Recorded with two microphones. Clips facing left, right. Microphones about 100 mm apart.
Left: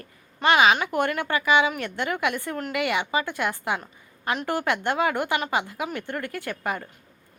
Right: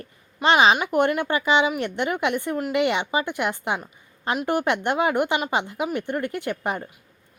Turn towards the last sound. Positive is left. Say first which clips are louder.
# right 3 dB
turn(degrees=-20)  # may be behind; listen again after turning